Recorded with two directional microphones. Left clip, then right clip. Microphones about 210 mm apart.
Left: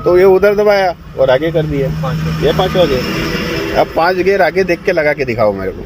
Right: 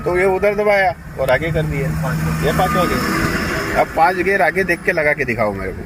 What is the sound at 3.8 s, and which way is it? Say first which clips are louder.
Speech: left 3 dB; 30° left (ahead or behind).